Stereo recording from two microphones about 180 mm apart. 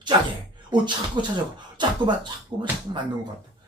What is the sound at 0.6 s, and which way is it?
Speech, 25° right (ahead or behind).